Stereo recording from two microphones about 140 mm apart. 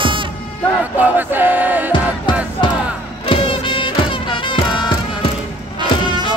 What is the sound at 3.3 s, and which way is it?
Music, 35° left (ahead or behind).